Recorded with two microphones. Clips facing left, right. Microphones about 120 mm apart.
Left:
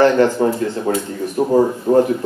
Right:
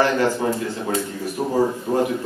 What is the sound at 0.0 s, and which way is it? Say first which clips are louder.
A man's voice: left 6 dB; 40° left (ahead or behind).